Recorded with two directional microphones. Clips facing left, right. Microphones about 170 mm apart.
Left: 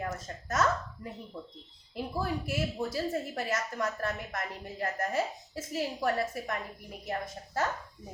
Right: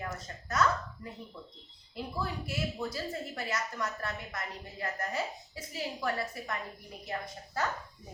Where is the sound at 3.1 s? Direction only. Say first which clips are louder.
Left 4 dB; 50° left (ahead or behind).